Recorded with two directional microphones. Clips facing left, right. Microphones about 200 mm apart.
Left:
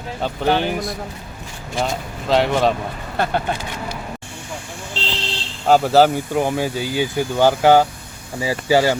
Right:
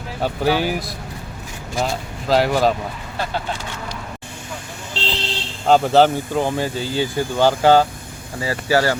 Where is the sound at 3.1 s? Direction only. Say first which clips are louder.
Left 5 dB; 60° left (ahead or behind).